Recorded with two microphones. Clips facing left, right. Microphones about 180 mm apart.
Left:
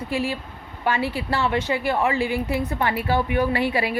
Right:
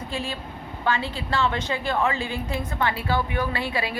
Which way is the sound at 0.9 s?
15° left (ahead or behind).